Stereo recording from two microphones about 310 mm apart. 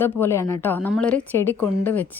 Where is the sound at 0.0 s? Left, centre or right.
Centre.